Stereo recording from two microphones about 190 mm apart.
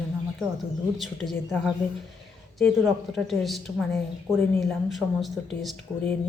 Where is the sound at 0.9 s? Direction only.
Centre (ahead or behind).